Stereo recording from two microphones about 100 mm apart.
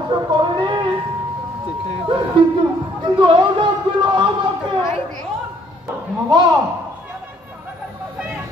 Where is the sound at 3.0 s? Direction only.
50° right (ahead or behind).